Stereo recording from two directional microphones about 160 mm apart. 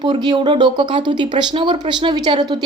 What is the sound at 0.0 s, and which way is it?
A woman's voice, 25° right (ahead or behind).